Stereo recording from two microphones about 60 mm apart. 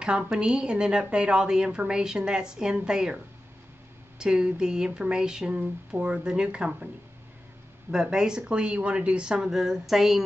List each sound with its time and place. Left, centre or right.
0.2 s a woman's voice: centre
4.2 s a woman's voice: centre
7.9 s a woman's voice: centre